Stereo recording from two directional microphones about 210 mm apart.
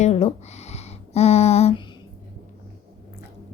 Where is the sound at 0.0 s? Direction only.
30° left (ahead or behind).